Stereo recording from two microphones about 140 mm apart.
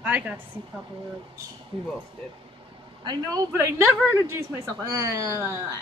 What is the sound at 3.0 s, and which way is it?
Speech, 30° right (ahead or behind).